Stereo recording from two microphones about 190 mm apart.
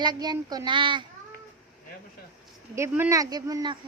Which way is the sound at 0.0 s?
20° right (ahead or behind).